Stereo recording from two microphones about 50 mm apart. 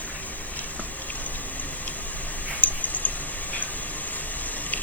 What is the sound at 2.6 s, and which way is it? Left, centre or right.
Clicking, left.